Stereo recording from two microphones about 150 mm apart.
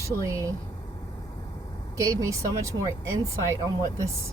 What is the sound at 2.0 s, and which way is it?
Speech, 20° right (ahead or behind).